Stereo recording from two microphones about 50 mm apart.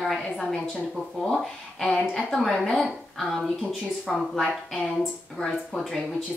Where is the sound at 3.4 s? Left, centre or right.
Centre.